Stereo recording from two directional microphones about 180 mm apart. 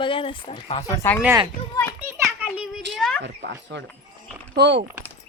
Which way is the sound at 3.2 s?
75° right (ahead or behind).